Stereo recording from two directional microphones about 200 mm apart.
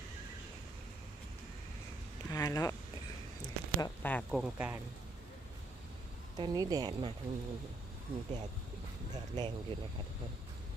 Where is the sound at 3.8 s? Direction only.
10° left (ahead or behind).